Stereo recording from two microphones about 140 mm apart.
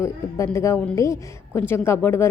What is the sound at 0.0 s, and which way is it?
A woman's voice, 20° left (ahead or behind).